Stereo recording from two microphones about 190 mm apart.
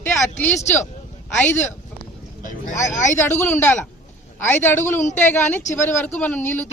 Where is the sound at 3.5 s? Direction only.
10° left (ahead or behind).